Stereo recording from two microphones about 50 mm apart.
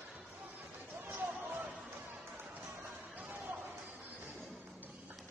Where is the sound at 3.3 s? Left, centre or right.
Right.